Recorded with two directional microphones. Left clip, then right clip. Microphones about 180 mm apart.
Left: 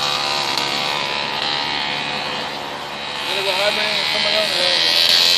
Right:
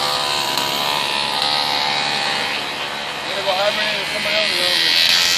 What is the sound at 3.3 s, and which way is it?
Music, 10° left (ahead or behind).